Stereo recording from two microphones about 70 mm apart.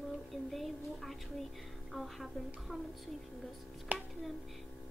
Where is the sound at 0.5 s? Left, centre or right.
Centre.